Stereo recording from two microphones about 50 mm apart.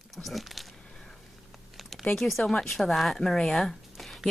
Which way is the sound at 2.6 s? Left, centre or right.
Centre.